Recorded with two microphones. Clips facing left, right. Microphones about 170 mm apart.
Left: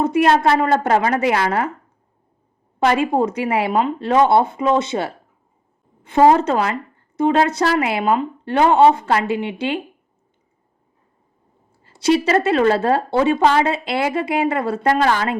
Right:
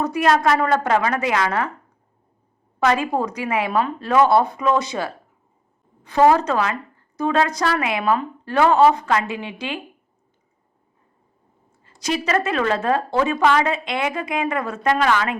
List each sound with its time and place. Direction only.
0.0 s a woman's voice: 25° left (ahead or behind)
2.8 s a woman's voice: 30° left (ahead or behind)
11.8 s a woman's voice: 30° left (ahead or behind)